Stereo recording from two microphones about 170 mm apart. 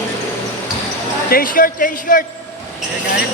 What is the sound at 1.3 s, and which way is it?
Speech, 55° left (ahead or behind).